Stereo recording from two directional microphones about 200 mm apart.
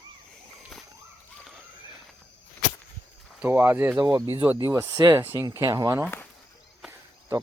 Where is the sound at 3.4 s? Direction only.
10° right (ahead or behind).